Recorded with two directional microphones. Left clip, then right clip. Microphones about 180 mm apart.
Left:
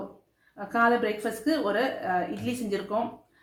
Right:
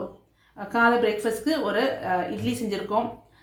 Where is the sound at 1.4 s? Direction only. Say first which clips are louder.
Left 1 dB; 35° right (ahead or behind).